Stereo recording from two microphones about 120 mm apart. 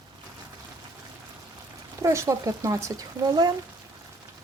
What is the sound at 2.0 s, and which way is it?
Speech, 25° right (ahead or behind).